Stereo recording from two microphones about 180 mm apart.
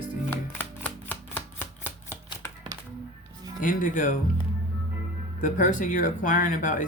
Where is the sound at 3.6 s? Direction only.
45° left (ahead or behind).